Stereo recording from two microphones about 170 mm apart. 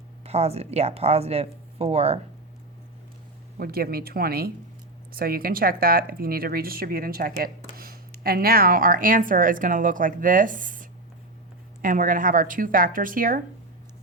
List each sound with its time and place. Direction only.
0.3 s speech: 35° right (ahead or behind)
3.6 s speech: 65° right (ahead or behind)